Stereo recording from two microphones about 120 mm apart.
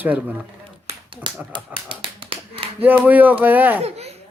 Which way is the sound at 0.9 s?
45° right (ahead or behind).